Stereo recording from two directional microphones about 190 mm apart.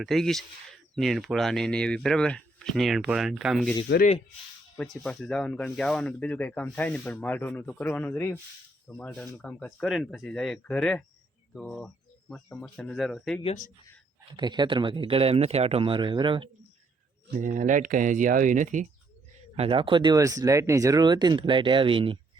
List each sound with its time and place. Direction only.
0.0 s speech: centre (ahead or behind)
4.8 s speech: 5° left (ahead or behind)
13.4 s speech: 35° left (ahead or behind)
14.3 s speech: 25° right (ahead or behind)
17.3 s speech: 40° right (ahead or behind)
19.5 s speech: 30° right (ahead or behind)